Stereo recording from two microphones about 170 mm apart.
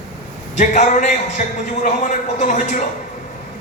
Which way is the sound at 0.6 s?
45° left (ahead or behind).